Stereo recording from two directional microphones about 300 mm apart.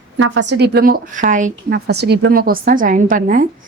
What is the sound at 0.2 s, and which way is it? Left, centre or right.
A woman's voice, right.